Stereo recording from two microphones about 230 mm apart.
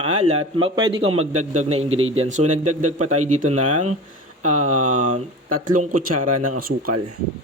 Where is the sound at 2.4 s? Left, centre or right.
Right.